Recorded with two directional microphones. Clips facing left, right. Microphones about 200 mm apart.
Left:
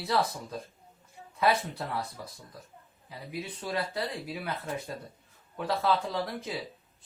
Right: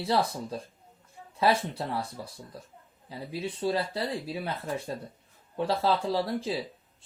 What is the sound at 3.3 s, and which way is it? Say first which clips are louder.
A man's voice: right 6 dB; 30° right (ahead or behind).